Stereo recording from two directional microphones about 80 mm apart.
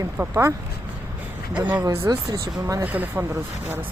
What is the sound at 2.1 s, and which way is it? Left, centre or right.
Speech, right.